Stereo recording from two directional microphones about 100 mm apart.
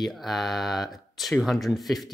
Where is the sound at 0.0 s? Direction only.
Centre (ahead or behind).